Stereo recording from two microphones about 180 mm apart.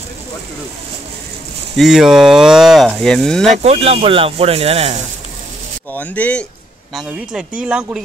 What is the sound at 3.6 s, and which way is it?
Speech, 35° right (ahead or behind).